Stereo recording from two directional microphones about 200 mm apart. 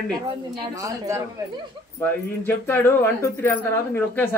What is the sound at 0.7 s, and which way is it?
Speech, 15° right (ahead or behind).